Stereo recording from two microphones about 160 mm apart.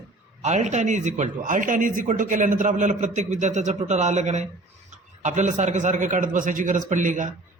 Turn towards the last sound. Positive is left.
turn(degrees=-50)  # may be behind; listen again after turning